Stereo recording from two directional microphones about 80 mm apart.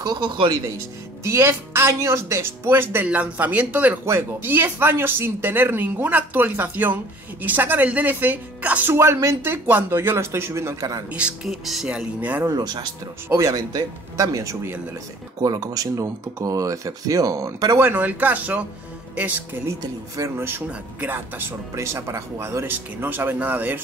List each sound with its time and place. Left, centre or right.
0.2 s speech: right
1.2 s speech: right
3.1 s speech: centre
4.0 s speech: right
8.9 s speech: right
10.8 s speech: right
11.1 s speech: centre
11.4 s speech: centre
11.9 s speech: centre
12.4 s speech: right
13.4 s speech: right
15.4 s speech: right
17.7 s speech: right
20.2 s speech: right